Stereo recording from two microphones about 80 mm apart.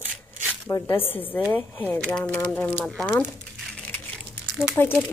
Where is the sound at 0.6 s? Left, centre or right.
Left.